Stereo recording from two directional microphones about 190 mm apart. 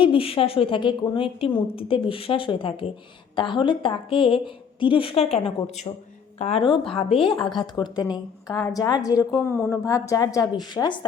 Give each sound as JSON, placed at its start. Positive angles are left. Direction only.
{"t": 0.0, "sound": "a woman's voice", "side_deg": 30}